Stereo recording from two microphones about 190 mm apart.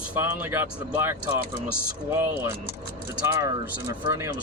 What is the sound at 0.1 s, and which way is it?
Speech, 10° right (ahead or behind).